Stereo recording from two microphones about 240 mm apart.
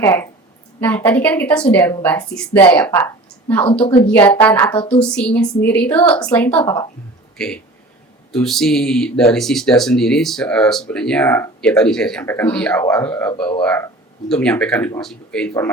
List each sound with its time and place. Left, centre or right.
0.0 s a woman's voice: centre
3.8 s speech: left
4.1 s a woman's voice: centre